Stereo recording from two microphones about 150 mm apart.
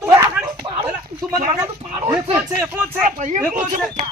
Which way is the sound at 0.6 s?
30° right (ahead or behind).